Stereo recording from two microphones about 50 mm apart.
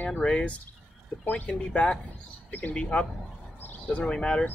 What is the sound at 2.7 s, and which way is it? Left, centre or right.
Speech, centre.